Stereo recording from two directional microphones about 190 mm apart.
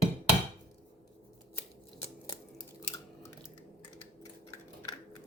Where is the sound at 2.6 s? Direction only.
15° left (ahead or behind).